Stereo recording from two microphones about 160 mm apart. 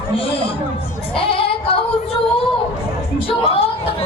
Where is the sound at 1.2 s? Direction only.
35° left (ahead or behind).